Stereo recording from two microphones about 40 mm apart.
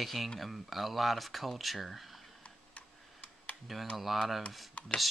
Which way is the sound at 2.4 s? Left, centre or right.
Left.